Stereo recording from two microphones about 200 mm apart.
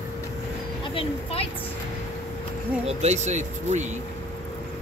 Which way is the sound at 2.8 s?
35° right (ahead or behind).